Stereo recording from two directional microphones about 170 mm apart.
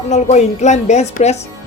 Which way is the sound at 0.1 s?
45° left (ahead or behind).